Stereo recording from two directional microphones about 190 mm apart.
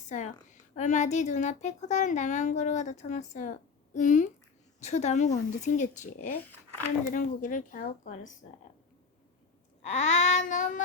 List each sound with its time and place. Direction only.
0.8 s speech: 40° left (ahead or behind)
9.8 s speech: 35° left (ahead or behind)